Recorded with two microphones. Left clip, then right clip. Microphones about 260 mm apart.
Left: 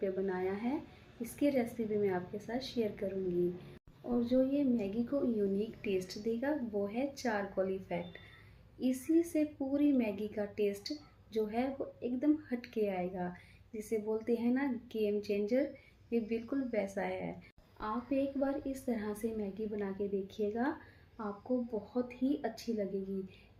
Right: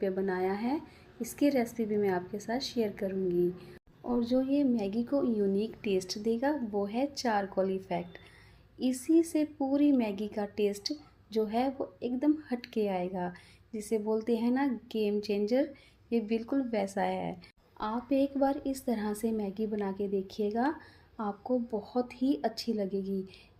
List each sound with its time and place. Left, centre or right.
0.0 s a woman's voice: right
4.1 s a woman's voice: right
21.9 s a woman's voice: right